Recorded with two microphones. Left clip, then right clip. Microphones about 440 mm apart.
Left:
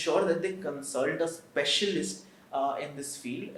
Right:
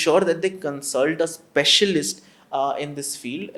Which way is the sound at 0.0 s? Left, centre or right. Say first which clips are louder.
Right 8 dB; right.